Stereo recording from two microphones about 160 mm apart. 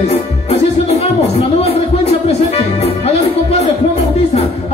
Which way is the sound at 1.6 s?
40° left (ahead or behind).